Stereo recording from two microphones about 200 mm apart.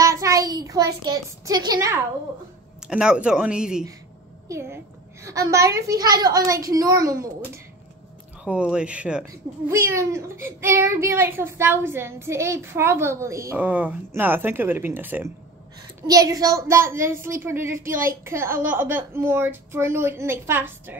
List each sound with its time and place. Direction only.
0.0 s a child's voice: 15° right (ahead or behind)
2.9 s a woman's voice: 5° right (ahead or behind)
8.5 s speech: 5° right (ahead or behind)